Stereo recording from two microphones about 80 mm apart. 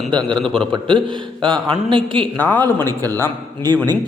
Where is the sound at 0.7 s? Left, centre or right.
Right.